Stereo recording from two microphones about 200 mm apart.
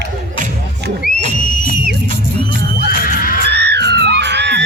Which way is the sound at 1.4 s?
40° left (ahead or behind).